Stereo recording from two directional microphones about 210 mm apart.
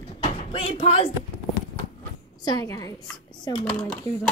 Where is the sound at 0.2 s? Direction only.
25° left (ahead or behind).